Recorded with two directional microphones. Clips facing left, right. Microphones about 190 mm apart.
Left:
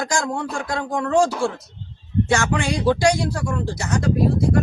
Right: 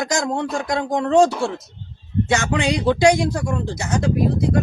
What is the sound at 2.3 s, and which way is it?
Speech, 20° right (ahead or behind).